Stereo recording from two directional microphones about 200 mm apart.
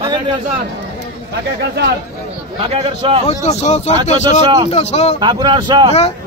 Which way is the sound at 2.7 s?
25° right (ahead or behind).